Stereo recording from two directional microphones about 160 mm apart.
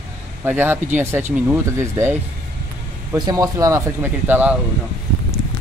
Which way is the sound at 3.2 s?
25° right (ahead or behind).